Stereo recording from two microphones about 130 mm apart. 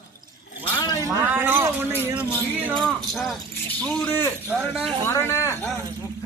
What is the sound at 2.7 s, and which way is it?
Music, 5° left (ahead or behind).